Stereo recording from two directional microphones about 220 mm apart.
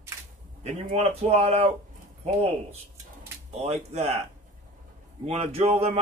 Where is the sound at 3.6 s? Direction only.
30° right (ahead or behind).